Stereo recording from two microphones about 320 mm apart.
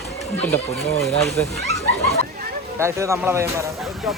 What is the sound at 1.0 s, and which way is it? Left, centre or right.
Speech, centre.